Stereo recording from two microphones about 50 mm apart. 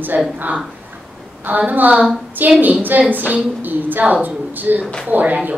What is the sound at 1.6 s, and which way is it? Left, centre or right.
A woman's voice, right.